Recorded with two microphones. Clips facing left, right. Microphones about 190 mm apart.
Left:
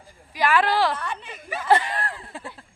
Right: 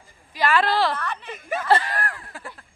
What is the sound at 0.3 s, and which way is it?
Speech, 15° left (ahead or behind).